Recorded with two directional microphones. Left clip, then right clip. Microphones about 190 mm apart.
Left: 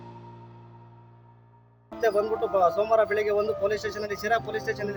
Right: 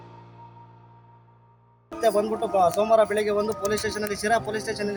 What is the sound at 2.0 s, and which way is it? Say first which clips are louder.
Speech: right 2 dB; 5° left (ahead or behind).